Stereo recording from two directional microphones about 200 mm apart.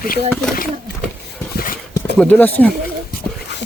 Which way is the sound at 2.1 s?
10° left (ahead or behind).